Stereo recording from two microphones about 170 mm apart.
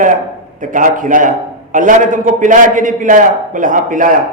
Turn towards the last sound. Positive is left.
turn(degrees=-50)  # may be behind; listen again after turning